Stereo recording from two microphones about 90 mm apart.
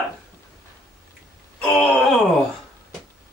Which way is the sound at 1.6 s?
5° left (ahead or behind).